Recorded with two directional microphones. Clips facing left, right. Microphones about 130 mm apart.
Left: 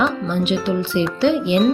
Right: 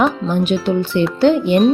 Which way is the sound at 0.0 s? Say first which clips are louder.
Right 3 dB; 45° right (ahead or behind).